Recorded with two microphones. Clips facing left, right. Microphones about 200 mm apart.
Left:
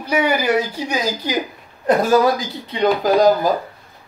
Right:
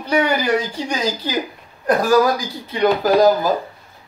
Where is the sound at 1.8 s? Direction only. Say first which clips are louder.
Left 1 dB; 25° left (ahead or behind).